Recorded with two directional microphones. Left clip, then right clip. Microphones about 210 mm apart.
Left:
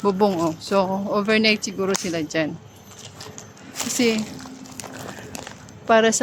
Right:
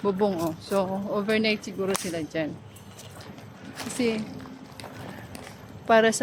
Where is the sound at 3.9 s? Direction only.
35° left (ahead or behind).